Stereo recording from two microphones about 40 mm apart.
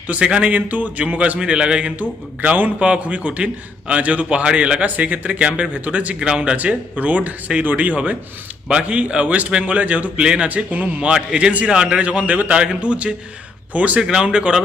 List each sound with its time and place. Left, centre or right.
0.1 s a man's voice: right
1.4 s a man's voice: right
2.0 s speech: right
2.7 s a man's voice: right
4.9 s a man's voice: right
6.1 s a man's voice: right
6.6 s a man's voice: right
8.9 s a man's voice: right
10.2 s a man's voice: right
10.5 s a man's voice: right
11.0 s a man's voice: centre; by 12.5 s right
12.5 s a man's voice: right
14.0 s a man's voice: right